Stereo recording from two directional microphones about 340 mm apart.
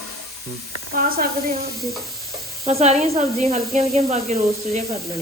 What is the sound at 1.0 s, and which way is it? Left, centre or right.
Speech, right.